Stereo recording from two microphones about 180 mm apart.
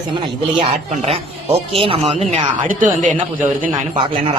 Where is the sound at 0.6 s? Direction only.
35° right (ahead or behind).